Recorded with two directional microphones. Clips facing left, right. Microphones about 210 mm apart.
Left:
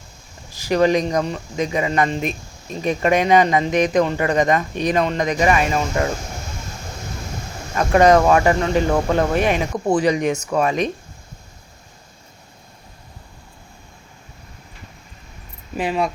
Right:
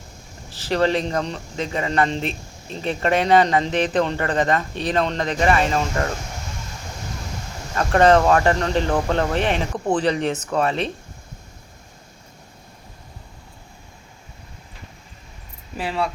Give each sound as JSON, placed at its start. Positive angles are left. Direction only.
{"t": 0.5, "sound": "speech", "side_deg": 15}
{"t": 7.8, "sound": "speech", "side_deg": 10}
{"t": 15.8, "sound": "speech", "side_deg": 15}